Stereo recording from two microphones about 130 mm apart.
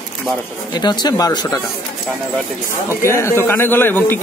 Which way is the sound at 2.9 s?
20° left (ahead or behind).